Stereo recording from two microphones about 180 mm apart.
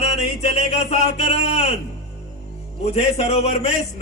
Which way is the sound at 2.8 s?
35° left (ahead or behind).